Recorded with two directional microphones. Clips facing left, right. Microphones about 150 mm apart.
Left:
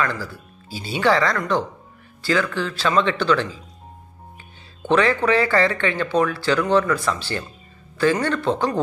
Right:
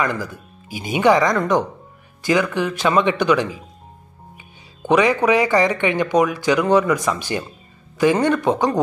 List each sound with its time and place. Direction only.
0.0 s speech: 15° right (ahead or behind)